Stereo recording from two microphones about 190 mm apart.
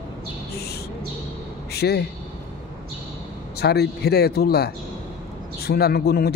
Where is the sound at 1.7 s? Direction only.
60° left (ahead or behind).